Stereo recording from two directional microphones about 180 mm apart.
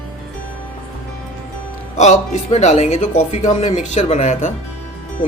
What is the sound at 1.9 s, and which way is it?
Speech, 40° left (ahead or behind).